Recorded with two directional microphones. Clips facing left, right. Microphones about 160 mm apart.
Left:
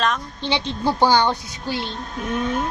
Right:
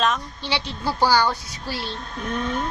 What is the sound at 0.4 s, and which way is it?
Speech, 20° left (ahead or behind).